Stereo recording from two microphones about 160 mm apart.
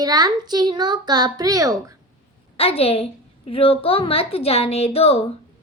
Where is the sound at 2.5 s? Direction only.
40° left (ahead or behind).